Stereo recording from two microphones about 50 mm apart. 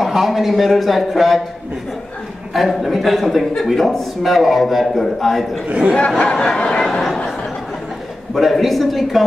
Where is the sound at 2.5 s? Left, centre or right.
Centre.